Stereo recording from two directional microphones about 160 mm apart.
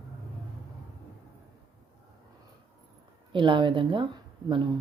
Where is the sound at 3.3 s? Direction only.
30° right (ahead or behind).